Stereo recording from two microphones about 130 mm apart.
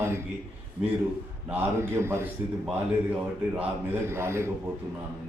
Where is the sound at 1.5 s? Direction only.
20° right (ahead or behind).